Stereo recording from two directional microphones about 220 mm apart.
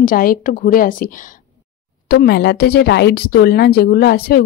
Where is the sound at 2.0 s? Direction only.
45° left (ahead or behind).